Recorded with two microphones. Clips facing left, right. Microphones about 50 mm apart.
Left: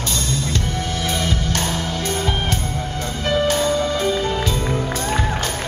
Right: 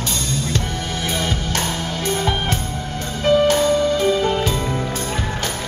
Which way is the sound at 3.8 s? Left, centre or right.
Left.